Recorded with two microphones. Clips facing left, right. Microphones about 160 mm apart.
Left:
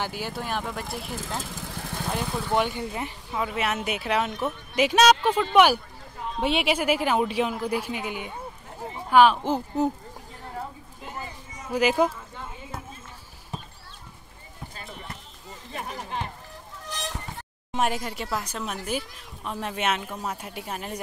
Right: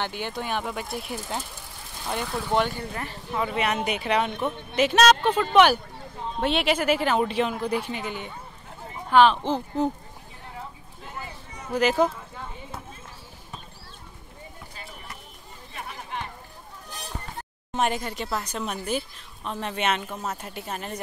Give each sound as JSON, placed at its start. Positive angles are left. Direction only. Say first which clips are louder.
{"t": 0.0, "sound": "speech", "louder": "right 1 dB", "side_deg": 5}
{"t": 1.4, "sound": "vehicle", "louder": "left 7 dB", "side_deg": 90}
{"t": 2.1, "sound": "speech", "louder": "right 1 dB", "side_deg": 0}
{"t": 2.7, "sound": "a woman's voice", "louder": "left 2 dB", "side_deg": 15}
{"t": 3.3, "sound": "a woman's voice", "louder": "right 2 dB", "side_deg": 5}
{"t": 11.6, "sound": "a woman's voice", "louder": "even", "side_deg": 10}
{"t": 15.7, "sound": "a sound", "louder": "left 3 dB", "side_deg": 40}
{"t": 16.8, "sound": "a sound", "louder": "left 4 dB", "side_deg": 90}
{"t": 17.7, "sound": "a woman's voice", "louder": "right 1 dB", "side_deg": 5}